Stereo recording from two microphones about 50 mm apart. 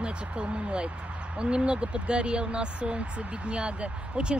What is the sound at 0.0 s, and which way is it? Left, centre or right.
Speech, right.